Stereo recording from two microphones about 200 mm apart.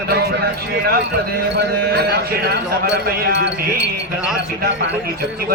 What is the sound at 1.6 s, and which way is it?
Speech, 55° right (ahead or behind).